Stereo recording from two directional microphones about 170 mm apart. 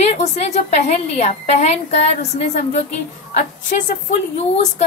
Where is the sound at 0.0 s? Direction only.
40° left (ahead or behind).